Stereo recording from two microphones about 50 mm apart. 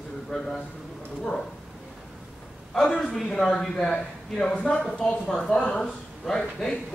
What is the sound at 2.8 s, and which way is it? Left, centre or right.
Speech, left.